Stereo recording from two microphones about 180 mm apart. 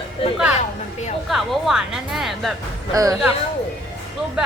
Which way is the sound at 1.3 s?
Centre (ahead or behind).